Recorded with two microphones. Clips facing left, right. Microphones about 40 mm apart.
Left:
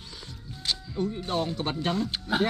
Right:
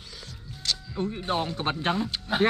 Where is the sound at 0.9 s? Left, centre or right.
Right.